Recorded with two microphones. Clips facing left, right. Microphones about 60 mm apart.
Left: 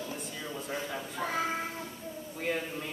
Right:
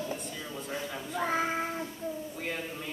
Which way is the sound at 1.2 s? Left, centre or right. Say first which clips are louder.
Right 3 dB; right.